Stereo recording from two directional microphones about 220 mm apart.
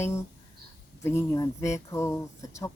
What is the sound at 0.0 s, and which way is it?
Speech, 10° left (ahead or behind).